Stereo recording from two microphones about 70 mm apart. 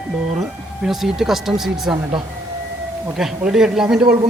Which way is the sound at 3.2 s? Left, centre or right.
Centre.